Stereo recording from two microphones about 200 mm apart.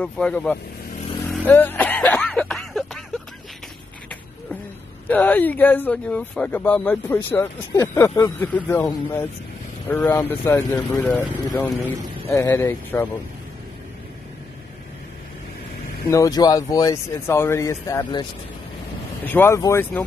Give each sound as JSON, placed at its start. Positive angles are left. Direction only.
{"t": 0.0, "sound": "speech", "side_deg": 5}
{"t": 1.5, "sound": "a sound", "side_deg": 10}
{"t": 5.0, "sound": "speech", "side_deg": 10}
{"t": 16.1, "sound": "speech", "side_deg": 20}
{"t": 19.2, "sound": "speech", "side_deg": 10}